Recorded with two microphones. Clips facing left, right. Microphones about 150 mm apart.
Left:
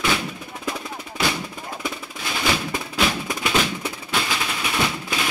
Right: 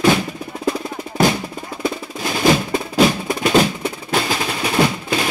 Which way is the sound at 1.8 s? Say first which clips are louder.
Right 10 dB; 40° right (ahead or behind).